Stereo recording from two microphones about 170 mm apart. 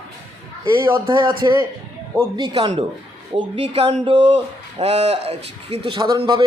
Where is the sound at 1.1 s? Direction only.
25° right (ahead or behind).